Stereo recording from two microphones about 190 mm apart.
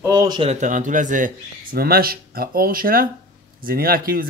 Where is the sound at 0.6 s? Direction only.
45° right (ahead or behind).